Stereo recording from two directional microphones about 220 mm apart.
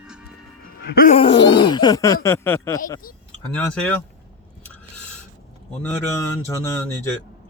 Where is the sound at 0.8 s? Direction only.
40° left (ahead or behind).